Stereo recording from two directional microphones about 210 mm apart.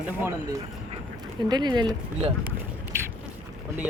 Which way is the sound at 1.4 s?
20° right (ahead or behind).